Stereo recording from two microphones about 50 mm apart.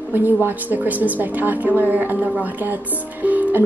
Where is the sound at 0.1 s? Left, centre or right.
Right.